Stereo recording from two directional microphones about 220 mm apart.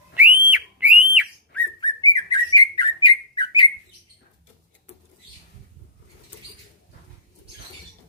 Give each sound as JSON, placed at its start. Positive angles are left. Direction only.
{"t": 0.1, "sound": "whistle", "side_deg": -10}
{"t": 1.8, "sound": "bird", "side_deg": 20}